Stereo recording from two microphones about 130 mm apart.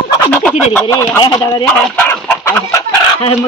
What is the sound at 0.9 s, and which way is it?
Speech, 25° left (ahead or behind).